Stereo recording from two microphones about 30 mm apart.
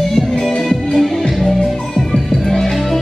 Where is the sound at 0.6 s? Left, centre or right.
Centre.